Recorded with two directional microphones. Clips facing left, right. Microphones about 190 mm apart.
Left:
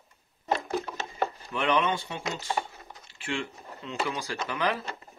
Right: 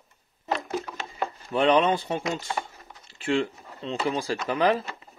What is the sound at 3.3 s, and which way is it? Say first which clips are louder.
Speech: right 8 dB; 35° right (ahead or behind).